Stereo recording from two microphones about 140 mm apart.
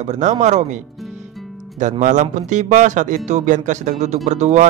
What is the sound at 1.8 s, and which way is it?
Speech, 60° right (ahead or behind).